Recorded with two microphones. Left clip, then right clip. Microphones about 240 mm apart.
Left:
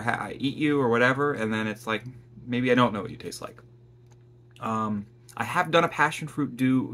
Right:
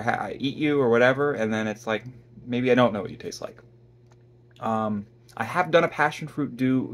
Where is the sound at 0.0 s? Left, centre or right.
Centre.